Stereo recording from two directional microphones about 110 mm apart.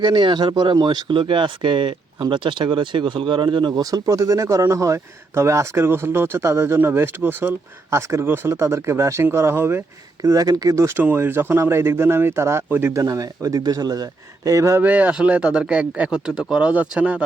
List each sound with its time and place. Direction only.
0.0 s speech: 45° right (ahead or behind); by 9.8 s 20° right (ahead or behind)
10.2 s speech: 35° right (ahead or behind)
14.8 s speech: 15° right (ahead or behind)